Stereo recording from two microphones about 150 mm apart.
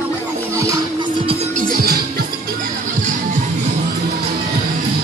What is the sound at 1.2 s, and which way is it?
Music, 45° right (ahead or behind).